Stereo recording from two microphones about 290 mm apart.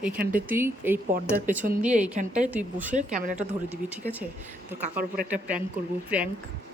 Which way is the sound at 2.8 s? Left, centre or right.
Right.